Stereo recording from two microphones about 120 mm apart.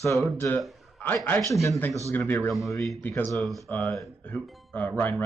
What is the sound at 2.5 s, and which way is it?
Speech, 25° left (ahead or behind).